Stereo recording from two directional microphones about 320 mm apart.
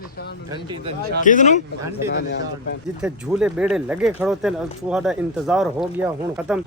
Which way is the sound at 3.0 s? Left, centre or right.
Centre.